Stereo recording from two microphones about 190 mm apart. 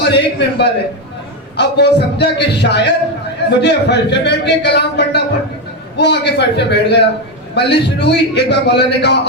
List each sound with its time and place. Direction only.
0.1 s a man's voice: 65° left (ahead or behind)